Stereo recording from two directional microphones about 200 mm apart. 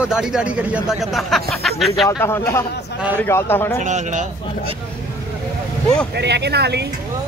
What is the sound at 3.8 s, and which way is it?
Speech, 35° right (ahead or behind).